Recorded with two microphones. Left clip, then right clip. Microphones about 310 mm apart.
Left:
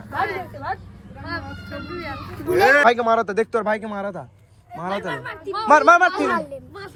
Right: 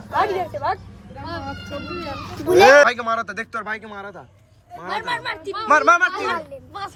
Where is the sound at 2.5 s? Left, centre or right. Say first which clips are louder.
Right 5 dB; right.